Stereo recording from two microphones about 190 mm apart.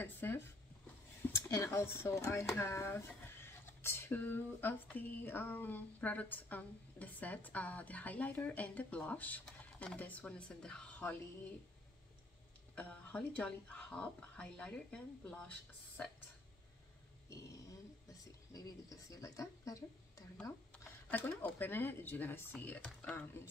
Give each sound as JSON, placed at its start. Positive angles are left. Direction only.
{"t": 0.0, "sound": "speech", "side_deg": 10}
{"t": 12.7, "sound": "speech", "side_deg": 5}
{"t": 18.0, "sound": "speech", "side_deg": 20}